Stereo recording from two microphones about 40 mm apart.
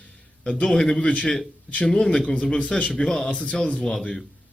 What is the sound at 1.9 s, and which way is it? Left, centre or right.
Speech, centre.